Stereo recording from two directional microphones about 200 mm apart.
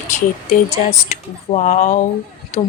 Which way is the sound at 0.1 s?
40° left (ahead or behind).